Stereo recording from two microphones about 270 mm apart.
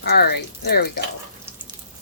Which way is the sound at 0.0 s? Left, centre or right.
Left.